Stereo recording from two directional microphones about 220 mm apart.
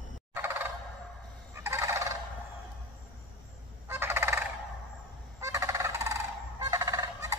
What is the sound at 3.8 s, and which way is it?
Fowl, 10° right (ahead or behind).